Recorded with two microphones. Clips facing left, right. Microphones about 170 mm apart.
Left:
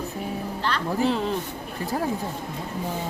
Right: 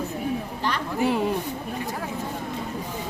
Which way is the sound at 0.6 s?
15° right (ahead or behind).